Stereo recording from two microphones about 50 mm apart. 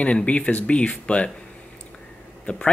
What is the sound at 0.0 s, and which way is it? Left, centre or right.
Speech, left.